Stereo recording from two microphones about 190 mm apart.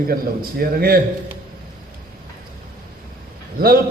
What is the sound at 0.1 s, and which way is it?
Speech, 50° right (ahead or behind).